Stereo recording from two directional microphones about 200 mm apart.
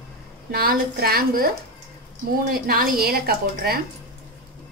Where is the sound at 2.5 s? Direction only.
50° right (ahead or behind).